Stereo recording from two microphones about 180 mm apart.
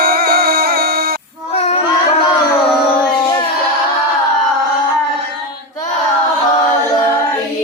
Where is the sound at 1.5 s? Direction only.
35° left (ahead or behind).